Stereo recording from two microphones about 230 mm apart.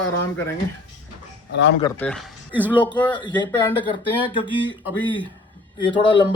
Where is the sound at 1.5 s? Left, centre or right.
Left.